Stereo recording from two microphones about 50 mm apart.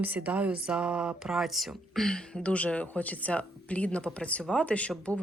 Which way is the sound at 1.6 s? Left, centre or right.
Centre.